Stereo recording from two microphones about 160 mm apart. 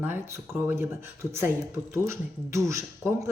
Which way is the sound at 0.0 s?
10° right (ahead or behind).